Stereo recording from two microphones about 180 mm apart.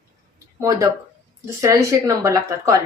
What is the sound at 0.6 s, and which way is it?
Speech, 20° right (ahead or behind).